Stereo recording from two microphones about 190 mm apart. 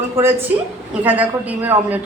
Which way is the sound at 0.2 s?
10° right (ahead or behind).